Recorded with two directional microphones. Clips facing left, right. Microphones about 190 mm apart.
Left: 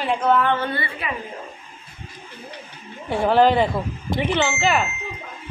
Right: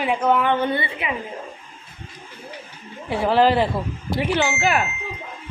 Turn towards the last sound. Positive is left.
turn(degrees=-10)  # may be behind; listen again after turning